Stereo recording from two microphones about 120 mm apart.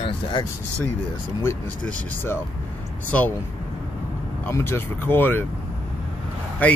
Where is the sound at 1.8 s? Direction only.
20° left (ahead or behind).